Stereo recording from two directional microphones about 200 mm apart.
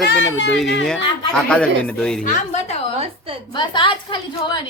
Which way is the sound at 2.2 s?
40° left (ahead or behind).